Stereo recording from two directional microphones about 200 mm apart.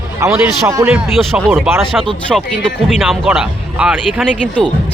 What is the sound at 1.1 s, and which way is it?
Speech, centre (ahead or behind).